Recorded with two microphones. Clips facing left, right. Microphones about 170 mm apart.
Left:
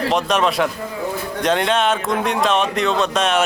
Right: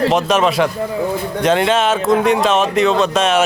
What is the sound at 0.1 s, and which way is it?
Speech, centre (ahead or behind).